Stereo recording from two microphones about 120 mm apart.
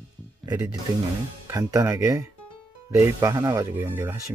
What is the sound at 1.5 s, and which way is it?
Speech, 25° right (ahead or behind).